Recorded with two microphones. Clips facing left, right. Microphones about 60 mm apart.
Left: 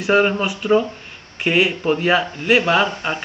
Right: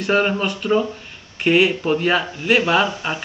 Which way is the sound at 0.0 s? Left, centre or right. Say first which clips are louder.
Left 2 dB; centre.